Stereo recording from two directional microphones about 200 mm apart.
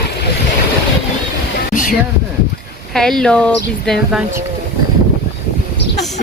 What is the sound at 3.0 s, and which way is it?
Speech, centre (ahead or behind).